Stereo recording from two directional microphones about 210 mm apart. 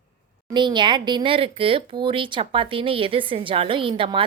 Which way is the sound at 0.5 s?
20° right (ahead or behind).